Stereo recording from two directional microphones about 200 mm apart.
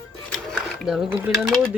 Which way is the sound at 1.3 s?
Centre (ahead or behind).